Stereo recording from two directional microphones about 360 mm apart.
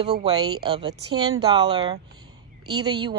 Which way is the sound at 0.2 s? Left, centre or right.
Centre.